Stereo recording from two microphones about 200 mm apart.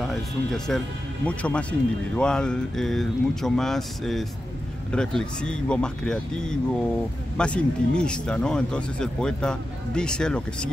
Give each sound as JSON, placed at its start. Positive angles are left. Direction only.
{"t": 0.7, "sound": "speech", "side_deg": 5}